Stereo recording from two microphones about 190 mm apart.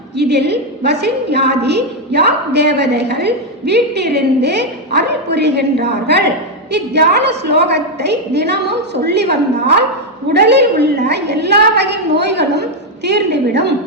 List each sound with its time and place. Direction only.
0.2 s a woman's voice: 60° right (ahead or behind)